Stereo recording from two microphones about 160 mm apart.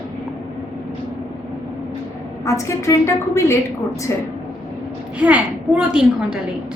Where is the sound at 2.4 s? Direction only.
20° left (ahead or behind).